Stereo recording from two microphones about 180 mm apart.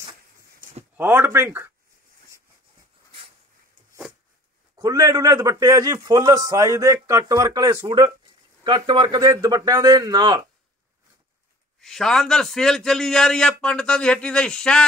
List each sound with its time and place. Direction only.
0.9 s speech: 10° right (ahead or behind)
4.7 s a man's voice: 20° right (ahead or behind)
11.8 s a man's voice: centre (ahead or behind)